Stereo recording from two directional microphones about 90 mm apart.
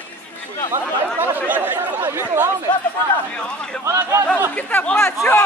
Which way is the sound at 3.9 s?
30° right (ahead or behind).